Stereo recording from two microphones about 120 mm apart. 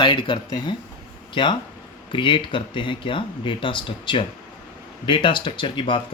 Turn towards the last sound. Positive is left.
turn(degrees=40)  # may be behind; listen again after turning